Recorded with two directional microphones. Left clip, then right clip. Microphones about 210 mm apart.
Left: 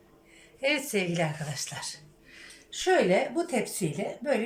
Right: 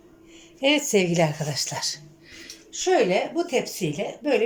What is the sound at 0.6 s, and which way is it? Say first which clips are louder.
A woman's voice: right 7 dB; 15° right (ahead or behind).